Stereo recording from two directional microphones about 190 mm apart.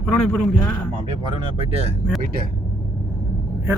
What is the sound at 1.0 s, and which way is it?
Speech, 25° right (ahead or behind).